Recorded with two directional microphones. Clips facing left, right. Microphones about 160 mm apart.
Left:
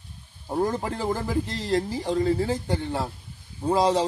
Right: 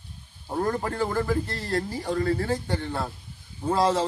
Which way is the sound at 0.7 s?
15° left (ahead or behind).